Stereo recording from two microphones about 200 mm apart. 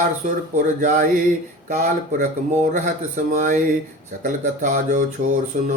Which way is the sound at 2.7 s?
40° right (ahead or behind).